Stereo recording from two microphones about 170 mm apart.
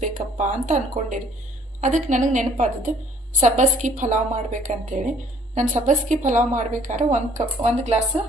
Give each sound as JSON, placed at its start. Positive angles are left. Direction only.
{"t": 0.0, "sound": "a woman's voice", "side_deg": -45}